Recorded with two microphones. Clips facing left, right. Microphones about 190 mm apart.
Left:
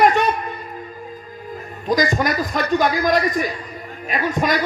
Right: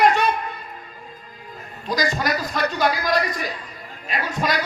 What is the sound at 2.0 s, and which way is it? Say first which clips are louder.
A man's voice: left 2 dB; 55° left (ahead or behind).